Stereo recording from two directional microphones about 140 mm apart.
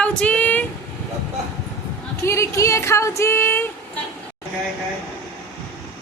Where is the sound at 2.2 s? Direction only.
20° left (ahead or behind).